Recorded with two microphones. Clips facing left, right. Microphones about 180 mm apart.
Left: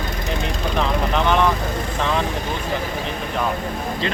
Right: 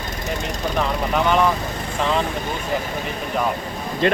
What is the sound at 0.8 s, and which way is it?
Speech, 10° right (ahead or behind).